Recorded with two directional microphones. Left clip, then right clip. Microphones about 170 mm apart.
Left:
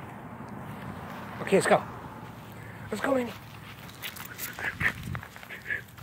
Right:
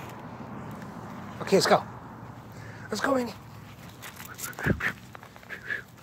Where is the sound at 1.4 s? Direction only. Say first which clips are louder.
Right 1 dB; 10° right (ahead or behind).